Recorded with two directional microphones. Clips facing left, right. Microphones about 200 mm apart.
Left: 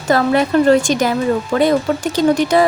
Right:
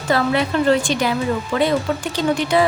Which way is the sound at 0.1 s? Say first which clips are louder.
Left 5 dB; 45° left (ahead or behind).